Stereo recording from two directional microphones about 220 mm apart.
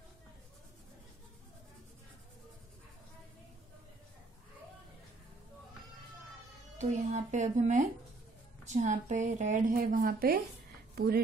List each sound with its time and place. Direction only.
6.8 s speech: 35° right (ahead or behind)